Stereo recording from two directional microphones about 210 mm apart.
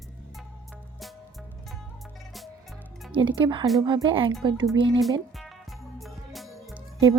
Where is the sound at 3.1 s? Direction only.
25° right (ahead or behind).